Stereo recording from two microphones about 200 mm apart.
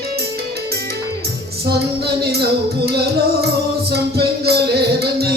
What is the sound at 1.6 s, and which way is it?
Music, 55° right (ahead or behind).